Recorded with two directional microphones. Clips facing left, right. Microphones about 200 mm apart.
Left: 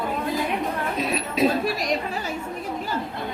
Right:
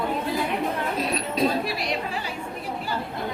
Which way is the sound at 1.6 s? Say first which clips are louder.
Left 4 dB; 45° left (ahead or behind).